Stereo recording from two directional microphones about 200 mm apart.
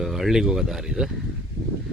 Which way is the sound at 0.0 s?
Centre (ahead or behind).